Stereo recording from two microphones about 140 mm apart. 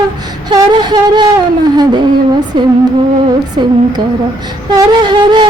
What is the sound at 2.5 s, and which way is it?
Speech, 30° right (ahead or behind).